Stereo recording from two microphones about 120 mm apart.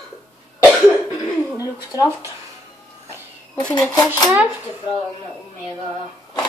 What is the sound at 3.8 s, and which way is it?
Speech, 35° left (ahead or behind).